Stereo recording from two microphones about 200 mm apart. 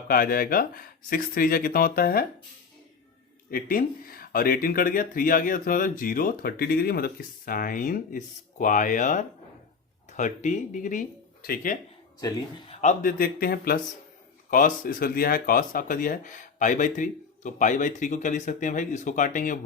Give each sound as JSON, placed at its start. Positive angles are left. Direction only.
{"t": 0.1, "sound": "speech", "side_deg": 45}
{"t": 3.5, "sound": "speech", "side_deg": 45}
{"t": 12.2, "sound": "speech", "side_deg": 20}
{"t": 12.8, "sound": "speech", "side_deg": 40}